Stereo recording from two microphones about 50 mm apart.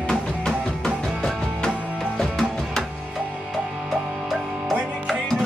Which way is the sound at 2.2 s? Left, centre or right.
Centre.